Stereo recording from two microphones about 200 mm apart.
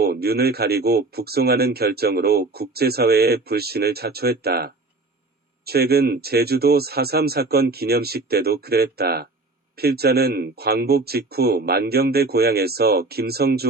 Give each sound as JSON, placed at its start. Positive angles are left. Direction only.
{"t": 0.0, "sound": "speech", "side_deg": -50}